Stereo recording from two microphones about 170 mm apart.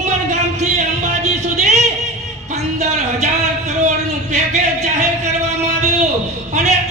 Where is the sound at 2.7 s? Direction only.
45° right (ahead or behind).